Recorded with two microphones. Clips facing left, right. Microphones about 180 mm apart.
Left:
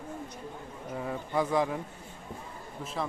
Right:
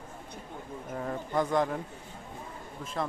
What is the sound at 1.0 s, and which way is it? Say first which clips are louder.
Speech: even; 5° left (ahead or behind).